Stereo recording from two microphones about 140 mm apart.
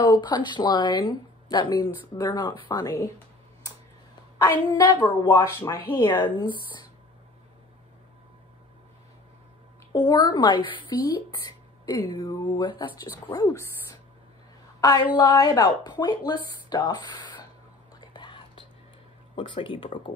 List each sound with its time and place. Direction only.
0.0 s speech: 30° left (ahead or behind)
4.7 s speech: 30° left (ahead or behind)
5.3 s speech: 20° left (ahead or behind)
10.0 s speech: 30° left (ahead or behind)
11.4 s a sound: 25° left (ahead or behind)
12.2 s speech: 30° left (ahead or behind)
14.8 s a woman's voice: 30° left (ahead or behind)
18.1 s whispering: 35° left (ahead or behind)
19.3 s speech: 35° left (ahead or behind)